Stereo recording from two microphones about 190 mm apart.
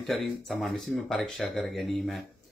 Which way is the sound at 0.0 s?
Centre (ahead or behind).